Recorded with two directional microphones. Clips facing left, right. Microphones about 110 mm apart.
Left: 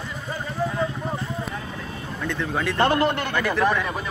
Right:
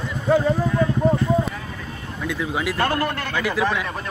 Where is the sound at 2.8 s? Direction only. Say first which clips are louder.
Left 4 dB; 20° left (ahead or behind).